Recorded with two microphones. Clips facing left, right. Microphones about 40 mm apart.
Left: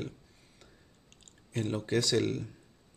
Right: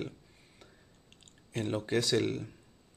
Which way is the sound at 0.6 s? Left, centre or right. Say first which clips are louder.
Right 1 dB; centre.